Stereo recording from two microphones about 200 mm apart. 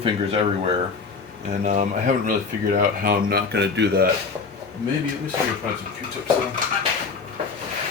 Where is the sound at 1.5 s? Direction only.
35° right (ahead or behind); by 4.0 s 55° right (ahead or behind).